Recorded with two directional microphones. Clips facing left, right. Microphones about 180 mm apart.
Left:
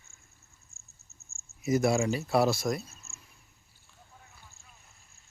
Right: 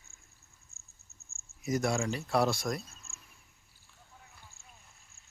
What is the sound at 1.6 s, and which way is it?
A man's voice, 5° left (ahead or behind).